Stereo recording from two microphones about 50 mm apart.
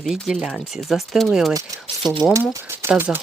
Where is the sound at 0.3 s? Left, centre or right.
Centre.